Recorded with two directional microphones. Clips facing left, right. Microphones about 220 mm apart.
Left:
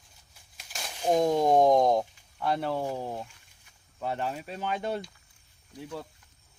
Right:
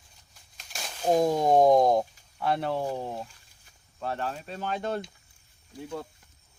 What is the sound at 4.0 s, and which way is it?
Speech, 15° left (ahead or behind).